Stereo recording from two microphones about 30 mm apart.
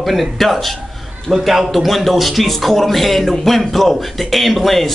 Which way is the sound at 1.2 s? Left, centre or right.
Centre.